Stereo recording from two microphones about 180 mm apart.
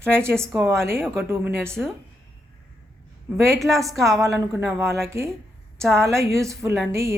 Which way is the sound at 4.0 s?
15° right (ahead or behind).